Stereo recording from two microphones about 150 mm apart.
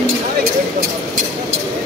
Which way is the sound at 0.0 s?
75° right (ahead or behind).